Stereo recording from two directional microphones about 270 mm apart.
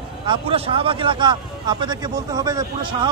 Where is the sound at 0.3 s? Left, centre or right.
Centre.